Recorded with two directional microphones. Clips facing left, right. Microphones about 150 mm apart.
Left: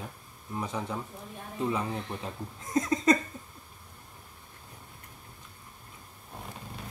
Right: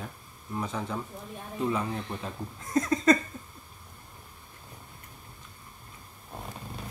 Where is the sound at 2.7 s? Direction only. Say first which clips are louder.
Right 2 dB; 20° left (ahead or behind).